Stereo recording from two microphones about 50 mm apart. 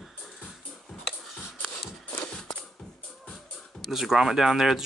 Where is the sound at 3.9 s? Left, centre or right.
Centre.